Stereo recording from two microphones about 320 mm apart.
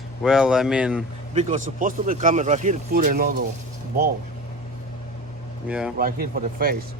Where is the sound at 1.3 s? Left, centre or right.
Right.